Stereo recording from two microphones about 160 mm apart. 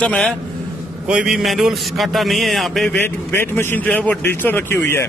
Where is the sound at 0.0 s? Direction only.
10° left (ahead or behind).